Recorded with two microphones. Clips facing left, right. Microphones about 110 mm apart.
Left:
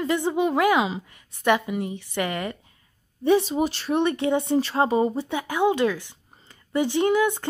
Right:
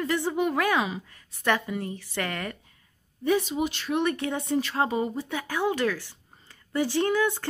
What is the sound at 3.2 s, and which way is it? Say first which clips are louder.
A woman's voice: left 5 dB; 30° left (ahead or behind).